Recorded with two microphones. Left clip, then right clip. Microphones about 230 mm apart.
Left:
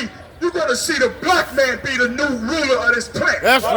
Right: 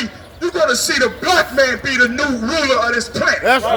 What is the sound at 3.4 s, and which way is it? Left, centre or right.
Speech, left.